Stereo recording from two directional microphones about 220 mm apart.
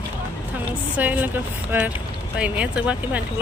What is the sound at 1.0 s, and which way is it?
Speech, 5° right (ahead or behind).